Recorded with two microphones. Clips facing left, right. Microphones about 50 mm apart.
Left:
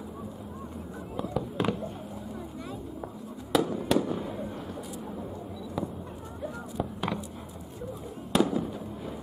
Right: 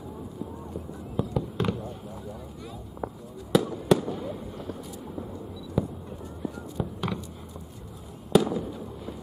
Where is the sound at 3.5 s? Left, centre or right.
Centre.